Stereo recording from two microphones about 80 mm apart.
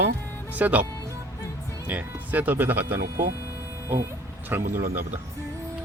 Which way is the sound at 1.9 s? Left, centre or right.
Centre.